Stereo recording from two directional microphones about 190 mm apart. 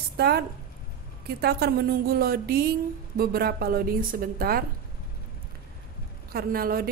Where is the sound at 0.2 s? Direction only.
55° right (ahead or behind).